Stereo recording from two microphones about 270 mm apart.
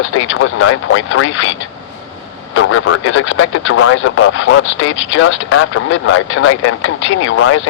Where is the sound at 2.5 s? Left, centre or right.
Left.